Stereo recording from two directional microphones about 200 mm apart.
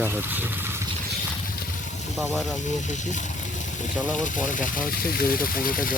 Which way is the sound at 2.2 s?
Centre (ahead or behind).